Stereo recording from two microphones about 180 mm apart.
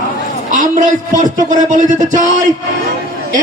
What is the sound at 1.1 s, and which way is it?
Speech, 45° right (ahead or behind).